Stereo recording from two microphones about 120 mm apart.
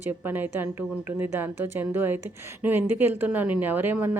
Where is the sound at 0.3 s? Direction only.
15° right (ahead or behind).